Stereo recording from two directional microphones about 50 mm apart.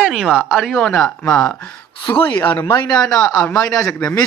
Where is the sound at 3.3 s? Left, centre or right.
Left.